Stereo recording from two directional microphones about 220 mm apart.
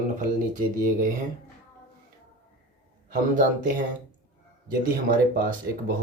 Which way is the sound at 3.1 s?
35° right (ahead or behind).